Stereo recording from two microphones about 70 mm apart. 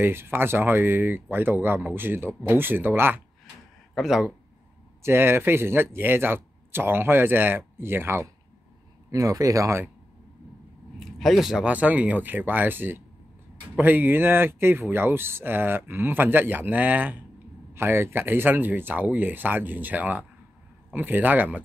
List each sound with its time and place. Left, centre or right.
0.0 s speech: right
3.9 s speech: centre
5.0 s speech: right
9.1 s speech: right
11.1 s speech: centre
11.6 s speech: right